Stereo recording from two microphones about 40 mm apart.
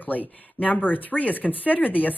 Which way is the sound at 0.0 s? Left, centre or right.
Left.